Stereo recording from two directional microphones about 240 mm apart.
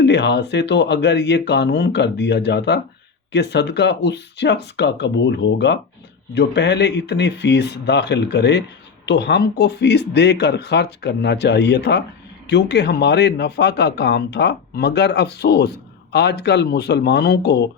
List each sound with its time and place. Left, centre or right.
0.0 s speech: left